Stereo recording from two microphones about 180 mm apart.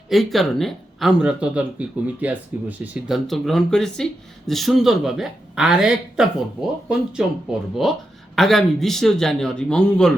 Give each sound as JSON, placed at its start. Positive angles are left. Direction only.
{"t": 0.1, "sound": "speech", "side_deg": 0}